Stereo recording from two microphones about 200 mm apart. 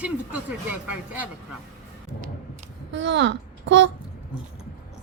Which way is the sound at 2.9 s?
65° right (ahead or behind).